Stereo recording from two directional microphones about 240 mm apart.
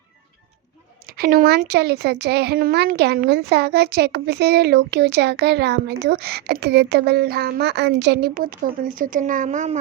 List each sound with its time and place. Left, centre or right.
1.0 s speech: right